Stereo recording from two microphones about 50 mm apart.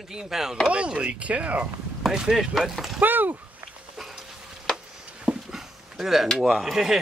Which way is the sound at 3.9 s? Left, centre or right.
Centre.